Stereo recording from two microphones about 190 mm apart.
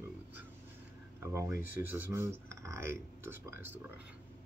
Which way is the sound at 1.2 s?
15° right (ahead or behind).